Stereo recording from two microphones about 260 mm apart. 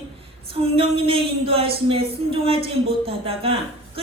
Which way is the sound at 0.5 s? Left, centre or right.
Right.